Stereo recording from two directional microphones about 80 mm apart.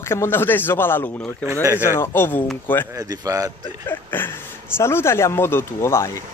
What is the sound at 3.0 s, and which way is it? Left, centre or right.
Speech, right.